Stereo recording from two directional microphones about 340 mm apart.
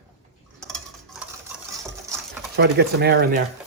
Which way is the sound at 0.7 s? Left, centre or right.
Centre.